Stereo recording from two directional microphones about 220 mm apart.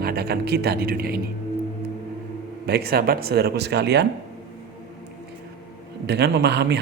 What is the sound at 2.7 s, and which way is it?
Speech, 45° right (ahead or behind).